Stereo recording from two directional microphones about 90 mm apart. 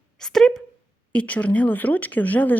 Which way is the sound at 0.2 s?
5° left (ahead or behind).